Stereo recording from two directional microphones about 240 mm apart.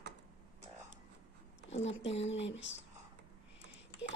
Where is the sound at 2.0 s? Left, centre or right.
Left.